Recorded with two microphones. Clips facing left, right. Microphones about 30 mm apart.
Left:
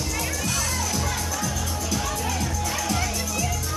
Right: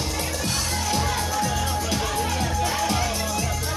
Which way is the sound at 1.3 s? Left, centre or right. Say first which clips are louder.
Right 4 dB; right.